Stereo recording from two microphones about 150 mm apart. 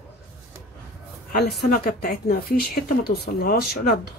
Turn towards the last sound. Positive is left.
turn(degrees=90)